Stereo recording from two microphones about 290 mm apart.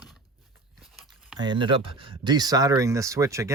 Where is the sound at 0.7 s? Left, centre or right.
Centre.